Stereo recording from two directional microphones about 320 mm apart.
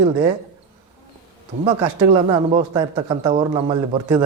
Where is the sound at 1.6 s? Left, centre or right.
Centre.